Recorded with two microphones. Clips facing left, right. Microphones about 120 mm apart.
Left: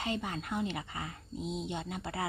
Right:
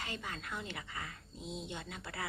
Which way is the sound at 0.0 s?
25° left (ahead or behind).